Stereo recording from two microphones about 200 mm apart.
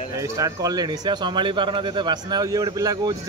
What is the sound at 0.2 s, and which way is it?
Speech, 15° right (ahead or behind).